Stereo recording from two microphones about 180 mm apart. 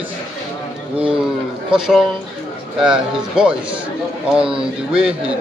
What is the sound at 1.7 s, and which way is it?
Speech, 5° right (ahead or behind).